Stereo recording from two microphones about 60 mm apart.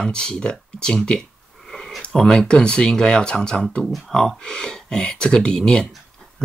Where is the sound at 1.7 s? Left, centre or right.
Centre.